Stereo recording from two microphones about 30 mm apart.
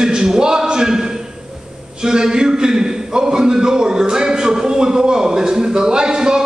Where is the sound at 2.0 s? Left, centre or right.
Right.